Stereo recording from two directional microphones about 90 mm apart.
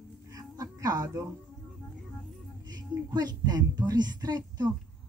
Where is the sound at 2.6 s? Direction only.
50° right (ahead or behind).